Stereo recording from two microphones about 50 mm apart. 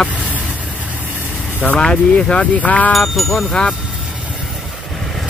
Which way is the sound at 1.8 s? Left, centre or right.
Centre.